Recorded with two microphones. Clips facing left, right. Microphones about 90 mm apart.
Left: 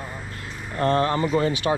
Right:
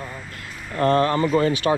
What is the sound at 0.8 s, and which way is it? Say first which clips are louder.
Speech: right 3 dB; 50° right (ahead or behind).